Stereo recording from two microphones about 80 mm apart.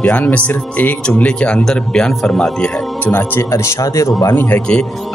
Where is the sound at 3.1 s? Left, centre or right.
Left.